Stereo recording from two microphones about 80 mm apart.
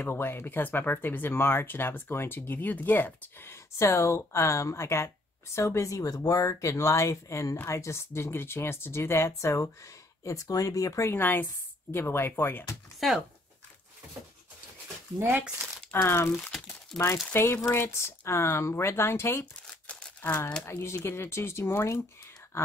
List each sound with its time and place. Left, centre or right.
0.1 s speech: left
3.7 s a woman's voice: left
13.0 s speech: centre
15.1 s speech: right
15.9 s a woman's voice: left
16.9 s speech: centre
17.3 s a woman's voice: left
19.9 s a sound: centre
20.6 s a woman's voice: left